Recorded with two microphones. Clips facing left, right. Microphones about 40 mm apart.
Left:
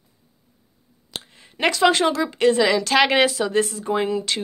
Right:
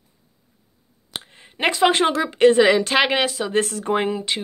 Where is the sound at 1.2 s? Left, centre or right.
Right.